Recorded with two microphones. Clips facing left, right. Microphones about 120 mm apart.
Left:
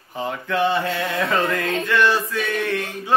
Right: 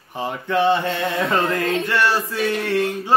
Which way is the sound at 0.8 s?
Centre (ahead or behind).